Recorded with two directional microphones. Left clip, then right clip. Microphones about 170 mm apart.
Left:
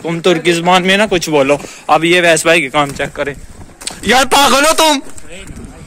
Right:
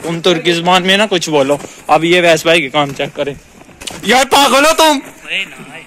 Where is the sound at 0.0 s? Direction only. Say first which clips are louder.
Even; 20° left (ahead or behind); by 2.9 s centre (ahead or behind).